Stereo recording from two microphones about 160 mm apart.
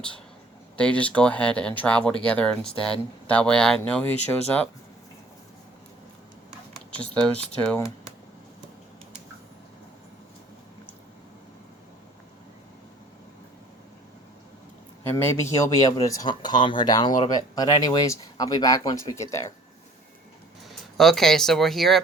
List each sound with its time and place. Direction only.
0.8 s speech: 5° left (ahead or behind)
15.0 s speech: 15° left (ahead or behind)
20.7 s speech: centre (ahead or behind)